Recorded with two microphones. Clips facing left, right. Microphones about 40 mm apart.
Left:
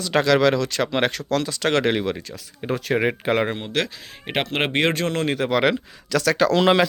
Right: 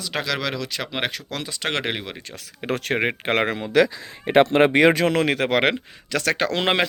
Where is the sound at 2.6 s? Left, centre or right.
Right.